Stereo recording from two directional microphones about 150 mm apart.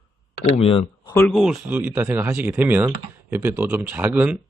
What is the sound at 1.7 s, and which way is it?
A man's voice, 15° right (ahead or behind).